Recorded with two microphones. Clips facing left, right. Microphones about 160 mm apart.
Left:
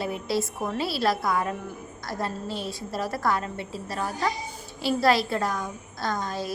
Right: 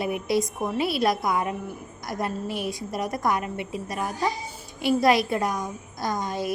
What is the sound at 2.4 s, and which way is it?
Speech, 25° left (ahead or behind).